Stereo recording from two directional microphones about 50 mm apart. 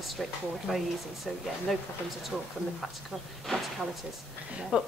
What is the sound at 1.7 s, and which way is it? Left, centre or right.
Speech, centre.